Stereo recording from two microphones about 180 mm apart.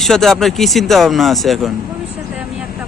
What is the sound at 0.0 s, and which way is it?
Speech, centre (ahead or behind).